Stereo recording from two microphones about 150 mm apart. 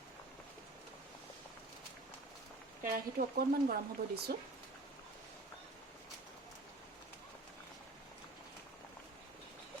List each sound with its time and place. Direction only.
2.8 s speech: 70° right (ahead or behind); by 4.4 s 90° right